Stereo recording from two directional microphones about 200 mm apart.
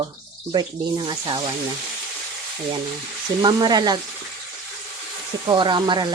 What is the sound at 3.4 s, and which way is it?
Speech, 20° right (ahead or behind).